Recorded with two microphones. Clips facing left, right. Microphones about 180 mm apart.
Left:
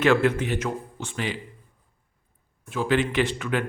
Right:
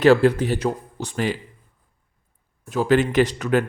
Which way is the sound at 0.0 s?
35° right (ahead or behind).